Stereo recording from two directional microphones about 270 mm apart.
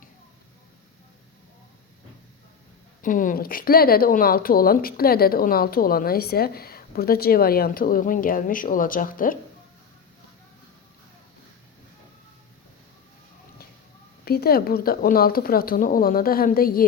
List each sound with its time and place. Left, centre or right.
3.0 s speech: left
14.3 s speech: left